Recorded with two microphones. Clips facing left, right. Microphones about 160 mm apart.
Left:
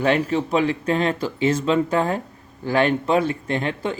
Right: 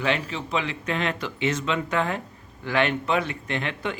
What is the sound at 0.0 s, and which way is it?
Speech, 45° left (ahead or behind).